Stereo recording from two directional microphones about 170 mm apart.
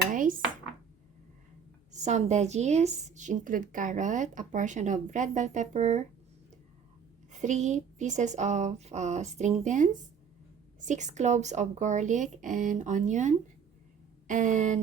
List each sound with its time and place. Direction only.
0.1 s dishes: 50° right (ahead or behind)
1.9 s a woman's voice: 45° right (ahead or behind)
7.3 s a woman's voice: 45° right (ahead or behind)